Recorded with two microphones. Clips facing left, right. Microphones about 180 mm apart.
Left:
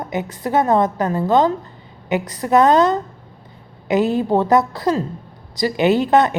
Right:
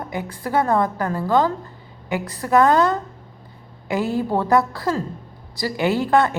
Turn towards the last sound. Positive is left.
turn(degrees=20)  # may be behind; listen again after turning